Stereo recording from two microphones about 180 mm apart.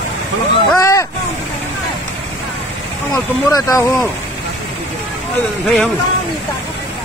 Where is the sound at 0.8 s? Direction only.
15° left (ahead or behind).